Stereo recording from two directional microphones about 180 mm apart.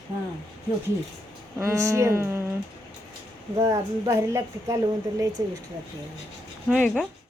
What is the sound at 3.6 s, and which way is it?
Speech, 15° right (ahead or behind).